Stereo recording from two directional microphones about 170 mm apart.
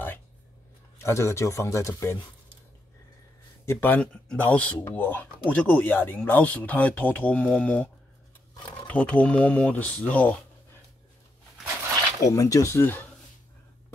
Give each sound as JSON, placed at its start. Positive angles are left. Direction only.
{"t": 0.9, "sound": "speech", "side_deg": 15}
{"t": 3.6, "sound": "speech", "side_deg": 10}
{"t": 12.2, "sound": "speech", "side_deg": 20}